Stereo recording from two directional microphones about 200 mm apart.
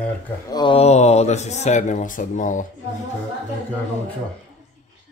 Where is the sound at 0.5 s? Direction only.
20° left (ahead or behind); by 2.6 s 40° left (ahead or behind).